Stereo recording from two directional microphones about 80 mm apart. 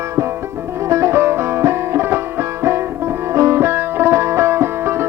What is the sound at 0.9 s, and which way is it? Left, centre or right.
Music, right.